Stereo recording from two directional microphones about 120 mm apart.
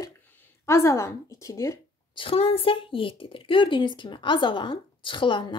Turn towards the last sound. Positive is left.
turn(degrees=45)  # may be behind; listen again after turning